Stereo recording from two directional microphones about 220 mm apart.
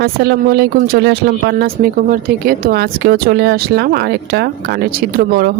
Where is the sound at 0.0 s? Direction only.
45° right (ahead or behind).